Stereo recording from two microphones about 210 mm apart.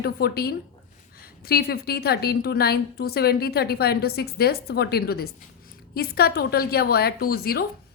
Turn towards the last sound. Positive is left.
turn(degrees=45)  # may be behind; listen again after turning